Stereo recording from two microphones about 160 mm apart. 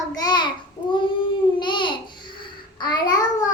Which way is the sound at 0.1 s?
25° left (ahead or behind).